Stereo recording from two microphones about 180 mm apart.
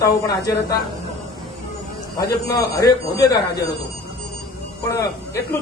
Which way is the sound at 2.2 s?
20° left (ahead or behind).